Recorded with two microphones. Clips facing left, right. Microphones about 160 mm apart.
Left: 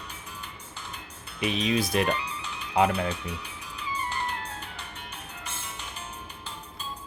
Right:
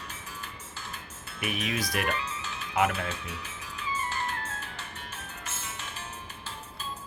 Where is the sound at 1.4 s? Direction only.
20° left (ahead or behind).